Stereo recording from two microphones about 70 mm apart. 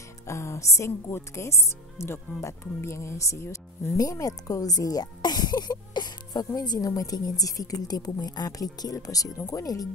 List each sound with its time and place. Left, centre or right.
0.3 s speech: left
3.9 s speech: left